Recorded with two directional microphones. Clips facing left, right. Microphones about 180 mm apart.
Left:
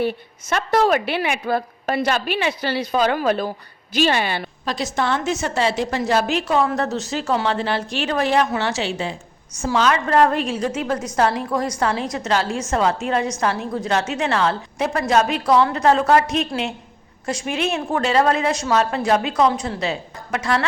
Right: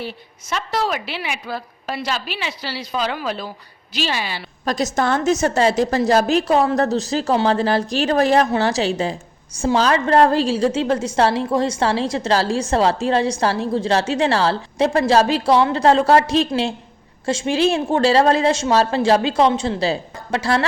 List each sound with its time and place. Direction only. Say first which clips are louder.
0.0 s a woman's voice: left 8 dB; 55° left (ahead or behind)
4.6 s a woman's voice: right 4 dB; 45° right (ahead or behind)